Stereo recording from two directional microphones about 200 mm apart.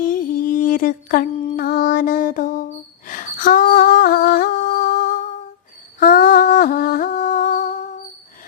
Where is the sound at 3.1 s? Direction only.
45° left (ahead or behind).